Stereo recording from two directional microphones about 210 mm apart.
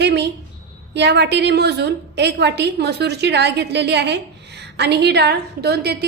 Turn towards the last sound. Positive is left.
turn(degrees=-50)  # may be behind; listen again after turning